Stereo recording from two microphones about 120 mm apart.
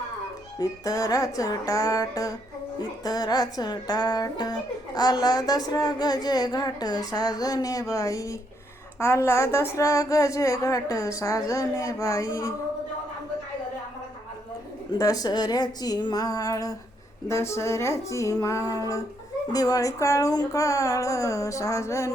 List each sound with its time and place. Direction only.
0.6 s a woman's voice: 30° left (ahead or behind)
14.9 s a woman's voice: 30° left (ahead or behind)